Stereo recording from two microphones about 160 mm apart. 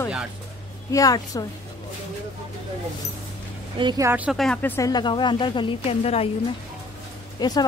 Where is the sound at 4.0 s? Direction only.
15° right (ahead or behind).